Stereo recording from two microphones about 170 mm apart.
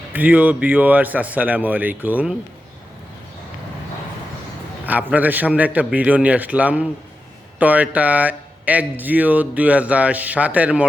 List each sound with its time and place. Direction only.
0.1 s speech: 10° right (ahead or behind)
4.9 s speech: 10° right (ahead or behind)